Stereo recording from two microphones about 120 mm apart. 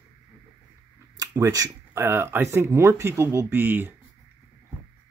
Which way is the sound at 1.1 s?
30° right (ahead or behind).